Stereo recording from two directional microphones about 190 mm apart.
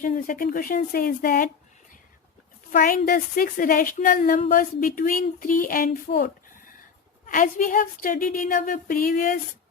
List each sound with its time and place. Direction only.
0.0 s a woman's voice: 45° left (ahead or behind)
2.7 s a woman's voice: 50° left (ahead or behind)